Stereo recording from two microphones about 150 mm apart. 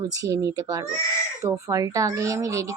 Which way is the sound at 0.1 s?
20° right (ahead or behind).